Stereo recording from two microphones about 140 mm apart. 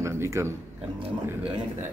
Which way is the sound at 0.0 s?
20° right (ahead or behind).